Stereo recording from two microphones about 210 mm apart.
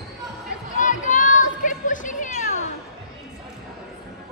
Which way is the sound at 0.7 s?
40° left (ahead or behind).